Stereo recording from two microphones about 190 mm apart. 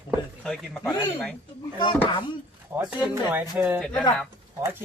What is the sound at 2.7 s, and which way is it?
Speech, 10° right (ahead or behind).